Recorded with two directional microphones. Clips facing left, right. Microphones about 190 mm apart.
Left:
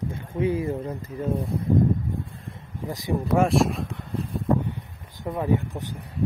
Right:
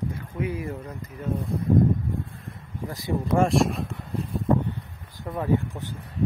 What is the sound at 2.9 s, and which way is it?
Speech, 20° left (ahead or behind).